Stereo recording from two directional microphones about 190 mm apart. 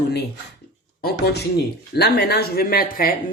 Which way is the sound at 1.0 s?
60° left (ahead or behind).